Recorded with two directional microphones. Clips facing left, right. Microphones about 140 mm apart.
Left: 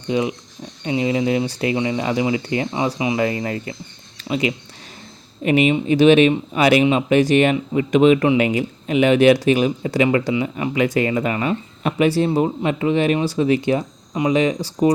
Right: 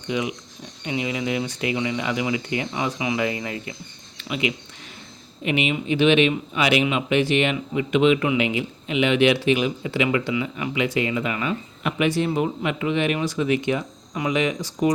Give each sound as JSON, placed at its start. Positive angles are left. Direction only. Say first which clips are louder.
{"t": 0.1, "sound": "speech", "louder": "left 5 dB", "side_deg": 35}
{"t": 3.2, "sound": "speech", "louder": "left 5 dB", "side_deg": 40}